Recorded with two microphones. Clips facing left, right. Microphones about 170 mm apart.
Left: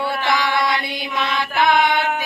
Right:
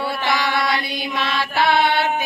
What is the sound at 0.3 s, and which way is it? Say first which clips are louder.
Chant: left 1 dB; 20° left (ahead or behind).